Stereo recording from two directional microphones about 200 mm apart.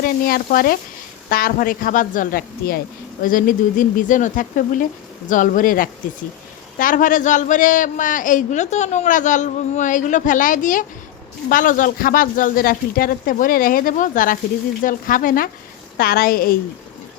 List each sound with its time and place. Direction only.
0.0 s a man's voice: 45° left (ahead or behind)